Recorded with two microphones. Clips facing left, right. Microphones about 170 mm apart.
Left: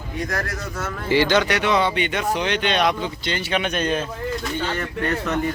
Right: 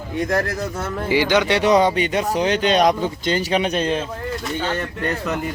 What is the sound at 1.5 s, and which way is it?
Speech, 35° right (ahead or behind).